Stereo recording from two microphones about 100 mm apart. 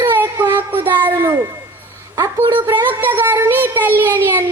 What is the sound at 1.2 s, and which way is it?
Speech, 30° right (ahead or behind).